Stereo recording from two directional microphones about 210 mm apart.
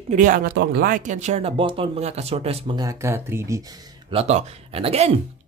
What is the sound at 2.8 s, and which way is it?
Speech, 10° right (ahead or behind).